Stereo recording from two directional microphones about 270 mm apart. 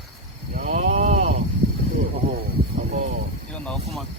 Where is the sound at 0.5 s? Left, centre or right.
Right.